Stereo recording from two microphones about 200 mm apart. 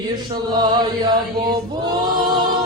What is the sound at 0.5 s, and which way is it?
Chant, 20° right (ahead or behind).